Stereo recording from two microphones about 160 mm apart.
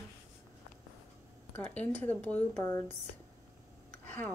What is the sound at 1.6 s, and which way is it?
Speech, 10° left (ahead or behind).